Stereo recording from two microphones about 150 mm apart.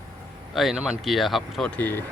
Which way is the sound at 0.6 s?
Centre (ahead or behind).